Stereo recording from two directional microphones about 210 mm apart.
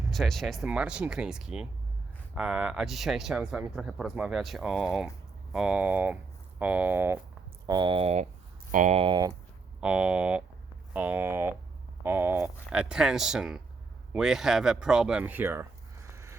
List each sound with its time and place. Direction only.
0.1 s speech: centre (ahead or behind)
7.7 s speech: 20° right (ahead or behind)
9.8 s speech: 5° right (ahead or behind)
16.1 s vehicle: 15° right (ahead or behind)